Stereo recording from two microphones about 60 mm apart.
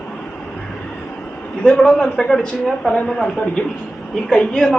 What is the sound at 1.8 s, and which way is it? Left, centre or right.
Speech, centre.